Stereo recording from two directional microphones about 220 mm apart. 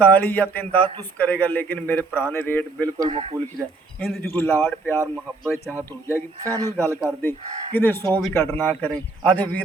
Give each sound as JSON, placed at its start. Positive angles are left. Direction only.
{"t": 0.0, "sound": "a man's voice", "side_deg": 10}
{"t": 3.1, "sound": "a man's voice", "side_deg": -25}
{"t": 4.0, "sound": "a man's voice", "side_deg": 5}